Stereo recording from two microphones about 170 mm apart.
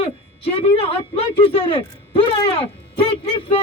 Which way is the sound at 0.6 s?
35° left (ahead or behind).